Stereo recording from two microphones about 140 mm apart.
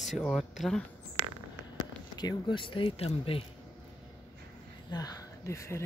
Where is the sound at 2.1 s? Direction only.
35° left (ahead or behind).